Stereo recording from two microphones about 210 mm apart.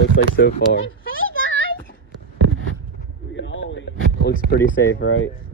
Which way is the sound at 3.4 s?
60° left (ahead or behind).